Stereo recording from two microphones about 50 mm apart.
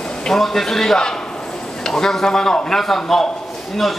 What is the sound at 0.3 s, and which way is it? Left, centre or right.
A man's voice, centre.